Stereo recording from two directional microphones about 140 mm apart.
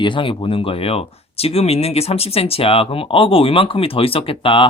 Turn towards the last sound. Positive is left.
turn(degrees=40)  # may be behind; listen again after turning